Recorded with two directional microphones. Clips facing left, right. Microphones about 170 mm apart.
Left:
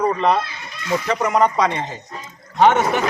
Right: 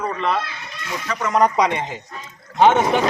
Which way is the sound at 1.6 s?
15° right (ahead or behind).